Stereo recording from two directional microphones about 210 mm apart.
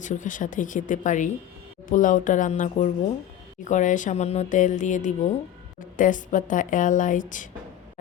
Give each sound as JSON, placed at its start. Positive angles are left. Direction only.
{"t": 0.0, "sound": "speech", "side_deg": 35}